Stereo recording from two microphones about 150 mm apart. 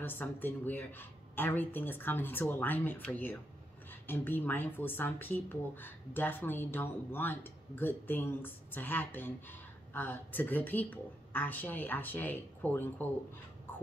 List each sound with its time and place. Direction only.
0.0 s a woman's voice: 15° left (ahead or behind)